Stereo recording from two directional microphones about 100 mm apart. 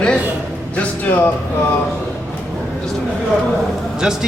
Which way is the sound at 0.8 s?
20° left (ahead or behind).